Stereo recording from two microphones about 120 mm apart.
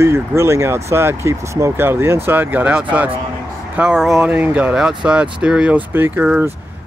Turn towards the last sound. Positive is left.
turn(degrees=-10)  # may be behind; listen again after turning